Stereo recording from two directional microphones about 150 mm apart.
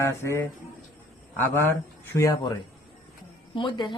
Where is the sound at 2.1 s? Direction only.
25° left (ahead or behind).